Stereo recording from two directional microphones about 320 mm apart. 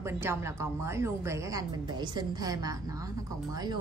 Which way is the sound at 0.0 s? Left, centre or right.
Centre.